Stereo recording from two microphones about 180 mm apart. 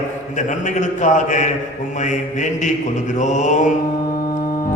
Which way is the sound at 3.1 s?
40° left (ahead or behind).